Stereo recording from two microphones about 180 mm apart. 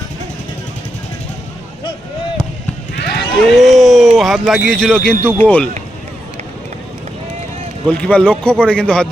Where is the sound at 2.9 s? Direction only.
70° left (ahead or behind).